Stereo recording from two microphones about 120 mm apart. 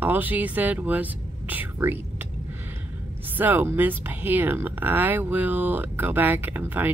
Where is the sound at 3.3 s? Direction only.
15° right (ahead or behind).